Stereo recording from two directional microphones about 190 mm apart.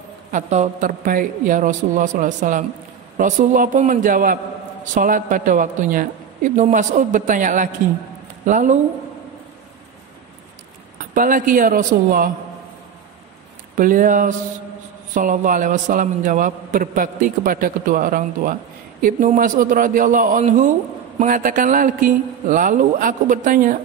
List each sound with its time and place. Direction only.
0.3 s a man's voice: 40° right (ahead or behind)
11.1 s a man's voice: 45° right (ahead or behind)
13.7 s a man's voice: 45° right (ahead or behind)